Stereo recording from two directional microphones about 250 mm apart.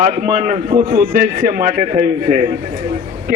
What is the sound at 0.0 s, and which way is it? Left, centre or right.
A man's voice, right.